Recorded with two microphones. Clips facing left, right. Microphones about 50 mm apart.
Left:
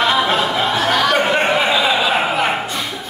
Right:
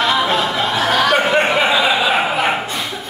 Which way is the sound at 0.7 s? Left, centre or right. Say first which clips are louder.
Right 2 dB; centre.